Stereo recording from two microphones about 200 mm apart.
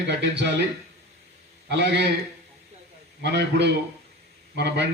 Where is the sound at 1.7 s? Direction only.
60° right (ahead or behind).